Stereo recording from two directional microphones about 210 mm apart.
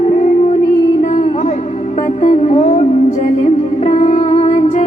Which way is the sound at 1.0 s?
35° left (ahead or behind).